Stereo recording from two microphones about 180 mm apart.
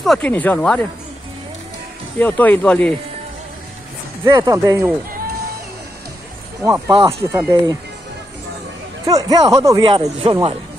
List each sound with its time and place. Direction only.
0.0 s speech: centre (ahead or behind)
2.1 s speech: 10° left (ahead or behind)
4.2 s speech: 20° right (ahead or behind)
6.6 s speech: 15° right (ahead or behind)
9.0 s a man's voice: 20° right (ahead or behind)